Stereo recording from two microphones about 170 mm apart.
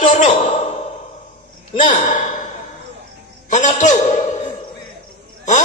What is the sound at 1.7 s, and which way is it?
Speech, 50° left (ahead or behind).